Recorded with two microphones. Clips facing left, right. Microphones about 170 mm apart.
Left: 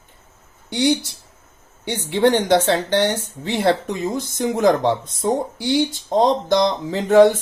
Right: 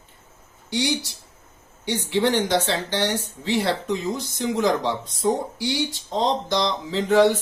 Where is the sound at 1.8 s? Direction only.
55° left (ahead or behind).